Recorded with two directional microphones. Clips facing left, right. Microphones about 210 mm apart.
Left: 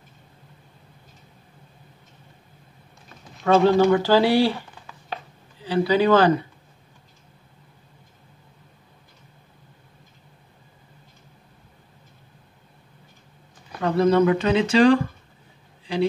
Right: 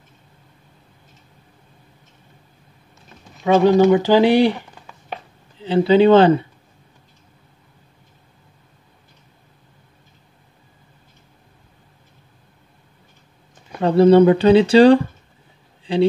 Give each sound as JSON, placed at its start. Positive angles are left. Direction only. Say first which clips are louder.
{"t": 3.4, "sound": "speech", "louder": "right 3 dB", "side_deg": -15}
{"t": 13.7, "sound": "speech", "louder": "right 7 dB", "side_deg": -30}
{"t": 15.8, "sound": "a sound", "louder": "right 6 dB", "side_deg": -30}